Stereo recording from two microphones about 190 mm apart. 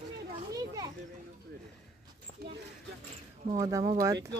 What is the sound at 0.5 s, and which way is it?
Children playing, 20° right (ahead or behind).